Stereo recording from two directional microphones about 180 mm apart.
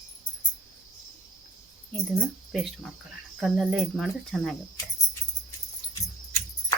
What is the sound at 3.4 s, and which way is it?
Speech, 5° right (ahead or behind).